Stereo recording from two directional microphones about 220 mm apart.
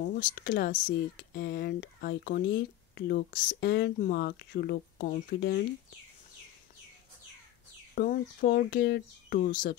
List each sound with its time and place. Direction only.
0.0 s speech: 40° left (ahead or behind)
7.9 s speech: 40° left (ahead or behind)